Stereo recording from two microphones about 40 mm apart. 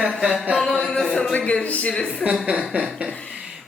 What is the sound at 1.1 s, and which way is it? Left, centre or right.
Speech, centre.